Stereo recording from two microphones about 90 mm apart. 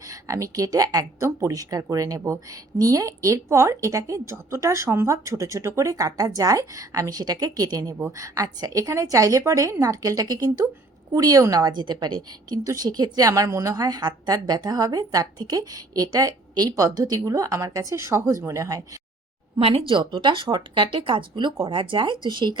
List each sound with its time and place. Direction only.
0.1 s speech: 35° right (ahead or behind)
11.8 s a woman's voice: 55° right (ahead or behind); by 18.8 s 35° right (ahead or behind)
19.5 s speech: 90° right; by 22.5 s 60° right (ahead or behind)